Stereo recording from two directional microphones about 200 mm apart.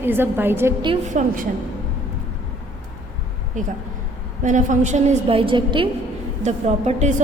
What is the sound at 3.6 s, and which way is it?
A woman's voice, 40° right (ahead or behind).